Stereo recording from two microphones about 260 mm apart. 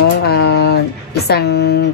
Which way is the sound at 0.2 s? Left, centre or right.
Left.